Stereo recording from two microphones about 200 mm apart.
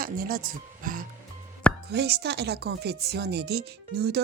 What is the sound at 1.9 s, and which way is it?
Speech, 55° right (ahead or behind).